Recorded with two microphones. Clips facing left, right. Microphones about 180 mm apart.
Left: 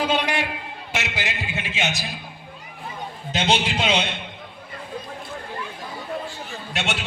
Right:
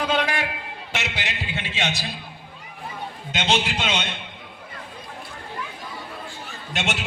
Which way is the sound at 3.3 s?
35° left (ahead or behind).